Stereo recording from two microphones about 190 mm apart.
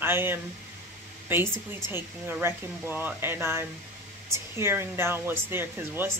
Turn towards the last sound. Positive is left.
turn(degrees=-10)  # may be behind; listen again after turning